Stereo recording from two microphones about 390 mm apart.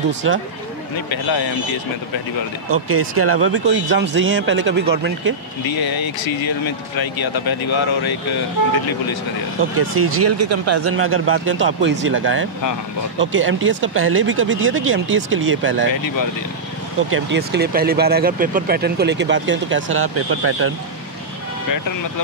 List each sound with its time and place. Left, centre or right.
0.2 s speech: right
1.1 s speech: left
2.7 s speech: right
5.7 s speech: left
9.8 s speech: right
17.1 s speech: right